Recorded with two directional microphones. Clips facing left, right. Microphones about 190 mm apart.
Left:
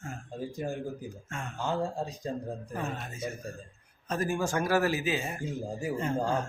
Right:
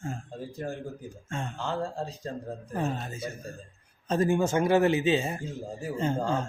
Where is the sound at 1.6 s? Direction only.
15° left (ahead or behind).